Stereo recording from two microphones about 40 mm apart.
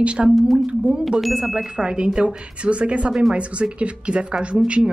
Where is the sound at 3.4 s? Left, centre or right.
Right.